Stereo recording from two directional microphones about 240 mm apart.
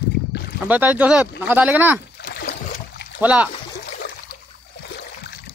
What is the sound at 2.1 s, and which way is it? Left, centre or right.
Splash, left.